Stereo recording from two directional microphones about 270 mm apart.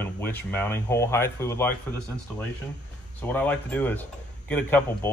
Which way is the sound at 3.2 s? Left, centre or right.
Centre.